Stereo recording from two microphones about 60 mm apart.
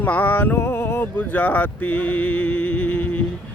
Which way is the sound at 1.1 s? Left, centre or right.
Left.